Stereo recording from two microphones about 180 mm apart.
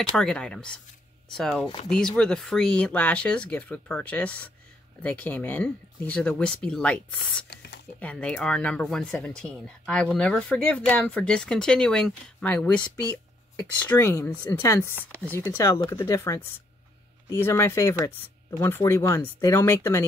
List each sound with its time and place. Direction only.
0.1 s speech: 5° left (ahead or behind)
7.4 s a sound: 70° left (ahead or behind)
8.0 s speech: 5° left (ahead or behind)
13.8 s speech: 15° left (ahead or behind)